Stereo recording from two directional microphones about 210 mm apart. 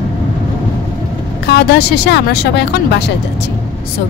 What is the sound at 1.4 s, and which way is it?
Speech, 50° left (ahead or behind).